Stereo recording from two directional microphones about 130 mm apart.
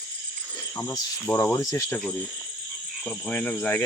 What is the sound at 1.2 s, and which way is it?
Cricket, 10° left (ahead or behind).